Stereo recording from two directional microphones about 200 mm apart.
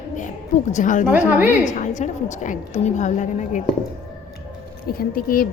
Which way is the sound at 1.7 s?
40° left (ahead or behind).